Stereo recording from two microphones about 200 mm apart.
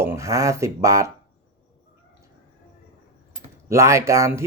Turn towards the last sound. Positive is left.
turn(degrees=-15)  # may be behind; listen again after turning